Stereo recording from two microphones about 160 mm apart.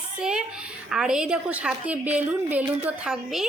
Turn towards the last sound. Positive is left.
turn(degrees=-5)  # may be behind; listen again after turning